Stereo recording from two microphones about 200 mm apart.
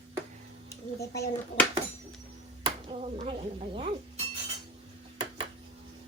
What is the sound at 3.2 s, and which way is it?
Chink, 25° right (ahead or behind).